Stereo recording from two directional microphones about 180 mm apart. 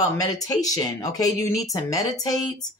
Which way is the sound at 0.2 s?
20° left (ahead or behind).